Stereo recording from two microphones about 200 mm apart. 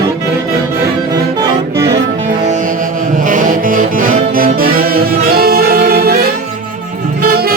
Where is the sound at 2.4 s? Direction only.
40° right (ahead or behind).